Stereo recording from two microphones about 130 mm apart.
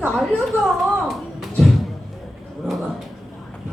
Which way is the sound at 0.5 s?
15° right (ahead or behind).